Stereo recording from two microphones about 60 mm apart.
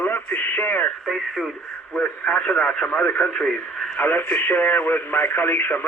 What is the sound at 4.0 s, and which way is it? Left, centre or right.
Speech, left.